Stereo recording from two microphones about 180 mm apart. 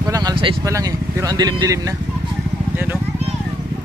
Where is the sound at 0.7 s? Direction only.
20° right (ahead or behind).